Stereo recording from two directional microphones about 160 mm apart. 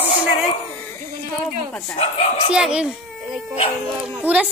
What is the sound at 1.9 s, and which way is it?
Speech, 35° left (ahead or behind).